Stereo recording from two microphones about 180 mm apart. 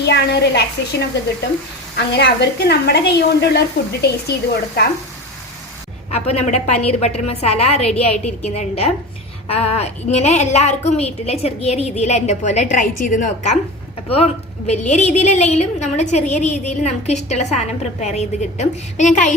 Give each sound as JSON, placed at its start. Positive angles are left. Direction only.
{"t": 0.0, "sound": "a woman's voice", "side_deg": 70}
{"t": 6.1, "sound": "a woman's voice", "side_deg": 35}
{"t": 14.7, "sound": "a woman's voice", "side_deg": 40}